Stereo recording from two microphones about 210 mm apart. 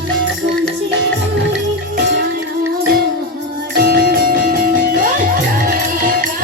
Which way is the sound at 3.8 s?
45° right (ahead or behind).